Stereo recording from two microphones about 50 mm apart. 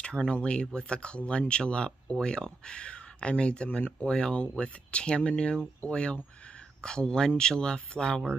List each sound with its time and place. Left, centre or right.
0.3 s speech: left